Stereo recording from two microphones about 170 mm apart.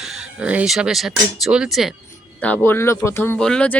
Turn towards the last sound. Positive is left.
turn(degrees=5)  # may be behind; listen again after turning